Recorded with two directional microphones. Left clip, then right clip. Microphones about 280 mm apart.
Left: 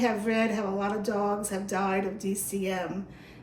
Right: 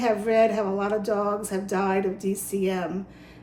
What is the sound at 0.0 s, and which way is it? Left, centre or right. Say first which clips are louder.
Speech: right 6 dB; centre.